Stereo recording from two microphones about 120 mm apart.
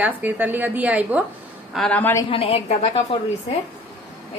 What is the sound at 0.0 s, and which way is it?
A woman's voice, 15° right (ahead or behind).